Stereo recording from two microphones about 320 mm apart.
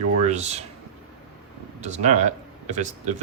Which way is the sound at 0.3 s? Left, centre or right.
Right.